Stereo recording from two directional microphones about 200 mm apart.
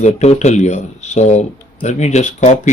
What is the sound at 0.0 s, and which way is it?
Speech, 35° left (ahead or behind).